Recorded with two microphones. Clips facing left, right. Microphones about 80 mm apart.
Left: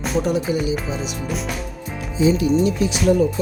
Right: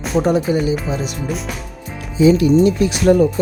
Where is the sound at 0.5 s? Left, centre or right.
Right.